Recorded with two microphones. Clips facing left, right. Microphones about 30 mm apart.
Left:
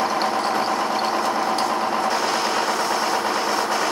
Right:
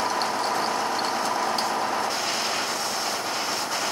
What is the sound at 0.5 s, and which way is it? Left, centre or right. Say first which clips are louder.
Vehicle: left 4 dB; centre.